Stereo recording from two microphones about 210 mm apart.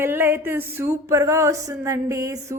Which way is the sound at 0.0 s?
10° right (ahead or behind).